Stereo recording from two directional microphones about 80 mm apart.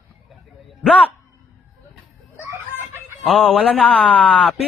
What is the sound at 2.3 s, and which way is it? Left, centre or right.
Chicken, right.